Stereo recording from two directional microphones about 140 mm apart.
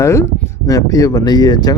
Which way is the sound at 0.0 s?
20° left (ahead or behind).